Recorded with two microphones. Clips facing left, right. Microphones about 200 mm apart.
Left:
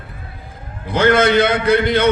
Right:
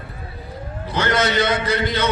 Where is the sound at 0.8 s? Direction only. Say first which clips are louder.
Left 7 dB; 55° left (ahead or behind).